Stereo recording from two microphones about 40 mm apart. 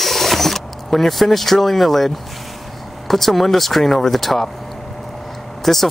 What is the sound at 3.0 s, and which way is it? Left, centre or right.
Speech, centre.